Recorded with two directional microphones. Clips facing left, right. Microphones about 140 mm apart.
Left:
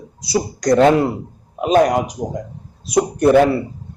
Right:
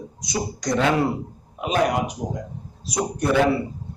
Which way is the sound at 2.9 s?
60° left (ahead or behind).